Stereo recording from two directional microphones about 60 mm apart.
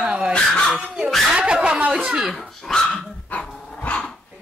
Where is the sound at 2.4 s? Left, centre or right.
Centre.